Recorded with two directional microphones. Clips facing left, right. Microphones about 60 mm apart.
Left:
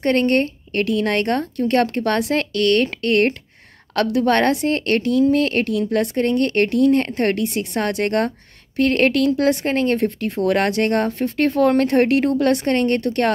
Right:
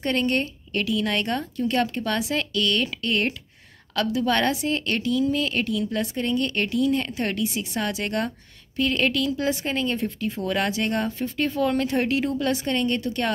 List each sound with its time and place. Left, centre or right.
0.0 s speech: left